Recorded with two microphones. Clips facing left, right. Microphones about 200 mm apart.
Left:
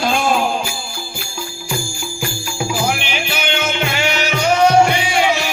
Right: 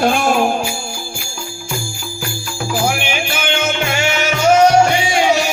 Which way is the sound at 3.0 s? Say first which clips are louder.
Right 2 dB; 50° right (ahead or behind).